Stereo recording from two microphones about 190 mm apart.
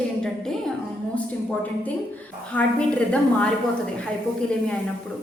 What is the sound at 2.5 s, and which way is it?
A woman's voice, 5° left (ahead or behind).